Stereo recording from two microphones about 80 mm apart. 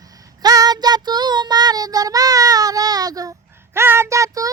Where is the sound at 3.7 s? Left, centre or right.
Right.